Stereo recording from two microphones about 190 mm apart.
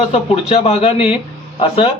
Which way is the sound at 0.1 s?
35° left (ahead or behind).